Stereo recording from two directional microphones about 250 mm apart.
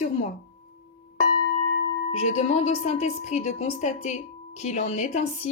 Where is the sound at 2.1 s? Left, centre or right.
Left.